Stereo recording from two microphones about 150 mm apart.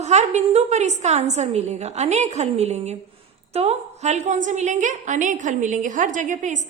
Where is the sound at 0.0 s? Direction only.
50° right (ahead or behind).